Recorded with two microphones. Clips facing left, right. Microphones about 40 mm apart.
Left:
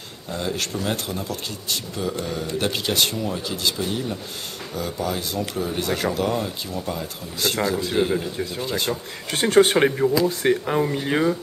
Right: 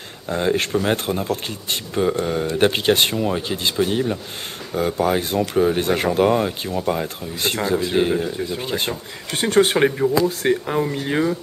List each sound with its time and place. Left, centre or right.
0.3 s a man's voice: right; by 8.3 s centre
8.5 s speech: right
9.3 s speech: centre